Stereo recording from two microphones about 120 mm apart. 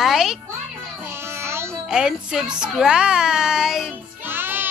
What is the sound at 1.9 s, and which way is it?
Speech, 5° right (ahead or behind).